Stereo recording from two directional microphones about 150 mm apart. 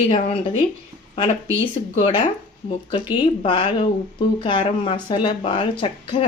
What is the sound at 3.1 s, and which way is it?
Speech, 35° left (ahead or behind).